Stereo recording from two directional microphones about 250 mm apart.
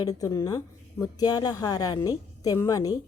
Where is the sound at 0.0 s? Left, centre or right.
Centre.